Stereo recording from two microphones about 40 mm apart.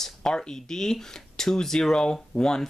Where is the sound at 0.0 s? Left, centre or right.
Centre.